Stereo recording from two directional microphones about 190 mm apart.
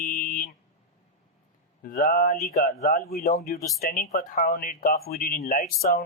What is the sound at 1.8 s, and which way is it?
Speech, 50° left (ahead or behind).